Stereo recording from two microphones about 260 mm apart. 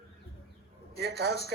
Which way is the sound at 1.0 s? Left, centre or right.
Right.